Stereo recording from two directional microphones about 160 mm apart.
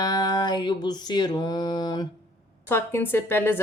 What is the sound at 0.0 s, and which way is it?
Mantra, 25° left (ahead or behind).